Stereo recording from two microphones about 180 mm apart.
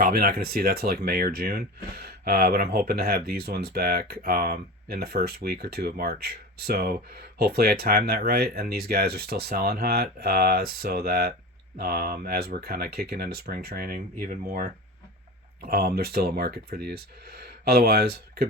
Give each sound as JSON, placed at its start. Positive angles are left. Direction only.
{"t": 0.0, "sound": "speech", "side_deg": -55}
{"t": 15.6, "sound": "speech", "side_deg": -55}